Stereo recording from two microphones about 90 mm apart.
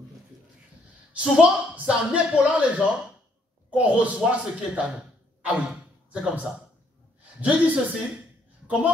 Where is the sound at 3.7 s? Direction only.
15° right (ahead or behind).